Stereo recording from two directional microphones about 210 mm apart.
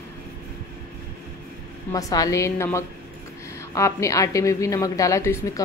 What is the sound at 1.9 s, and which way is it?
A woman's voice, 15° left (ahead or behind).